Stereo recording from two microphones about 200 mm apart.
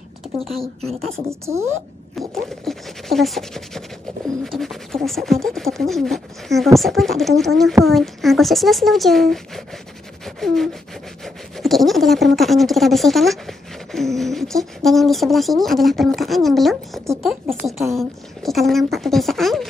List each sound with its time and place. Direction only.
0.6 s speech: 30° right (ahead or behind)
0.9 s speech: centre (ahead or behind)
1.3 s a woman's voice: 15° right (ahead or behind)
2.1 s speech: centre (ahead or behind)
10.2 s a sound: centre (ahead or behind)
11.5 s speech: centre (ahead or behind)